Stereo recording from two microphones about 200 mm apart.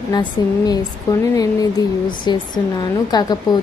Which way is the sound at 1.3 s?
15° left (ahead or behind).